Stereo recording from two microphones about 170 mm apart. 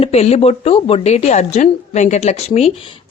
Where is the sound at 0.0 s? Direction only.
40° left (ahead or behind).